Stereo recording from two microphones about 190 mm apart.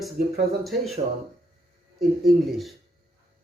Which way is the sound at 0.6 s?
Centre (ahead or behind).